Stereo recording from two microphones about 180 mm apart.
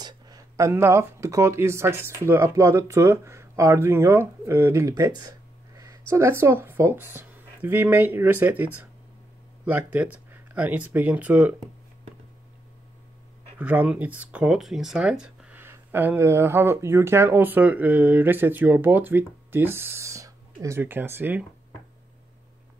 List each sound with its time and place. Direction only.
0.0 s speech: 20° right (ahead or behind)
9.7 s speech: 10° right (ahead or behind)
13.6 s speech: 10° right (ahead or behind)